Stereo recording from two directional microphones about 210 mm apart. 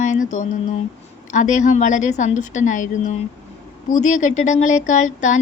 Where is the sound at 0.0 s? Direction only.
35° left (ahead or behind).